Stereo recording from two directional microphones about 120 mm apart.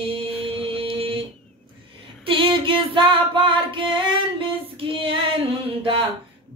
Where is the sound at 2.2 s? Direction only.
45° right (ahead or behind).